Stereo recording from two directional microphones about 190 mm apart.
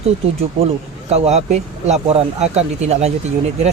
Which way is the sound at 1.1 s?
35° right (ahead or behind).